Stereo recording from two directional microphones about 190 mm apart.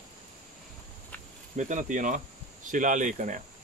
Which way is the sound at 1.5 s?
40° right (ahead or behind).